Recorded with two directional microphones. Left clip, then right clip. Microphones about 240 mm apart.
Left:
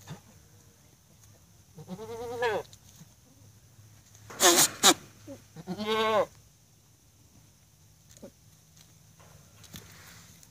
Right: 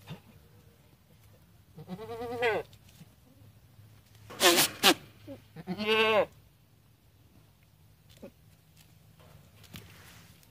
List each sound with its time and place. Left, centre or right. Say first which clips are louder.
1.9 s goat: even; centre
4.4 s wail: left 1 dB; centre
5.6 s goat: right 2 dB; centre
8.2 s a sound: even; centre